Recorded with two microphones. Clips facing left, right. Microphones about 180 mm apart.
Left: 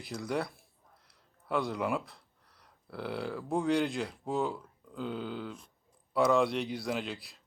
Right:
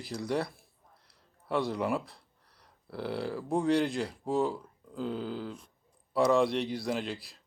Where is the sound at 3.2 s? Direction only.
Centre (ahead or behind).